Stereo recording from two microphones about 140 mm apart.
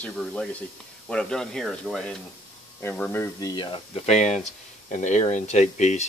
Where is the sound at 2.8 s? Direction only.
15° left (ahead or behind).